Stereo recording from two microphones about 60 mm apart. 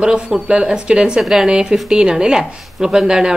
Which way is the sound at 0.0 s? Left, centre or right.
Centre.